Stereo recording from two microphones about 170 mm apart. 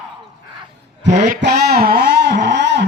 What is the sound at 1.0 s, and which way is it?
Speech, 45° right (ahead or behind).